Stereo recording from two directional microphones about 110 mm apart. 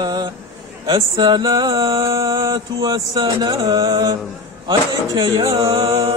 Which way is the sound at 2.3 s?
30° right (ahead or behind).